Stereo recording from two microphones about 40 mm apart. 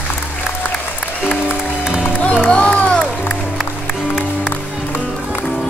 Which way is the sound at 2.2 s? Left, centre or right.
Left.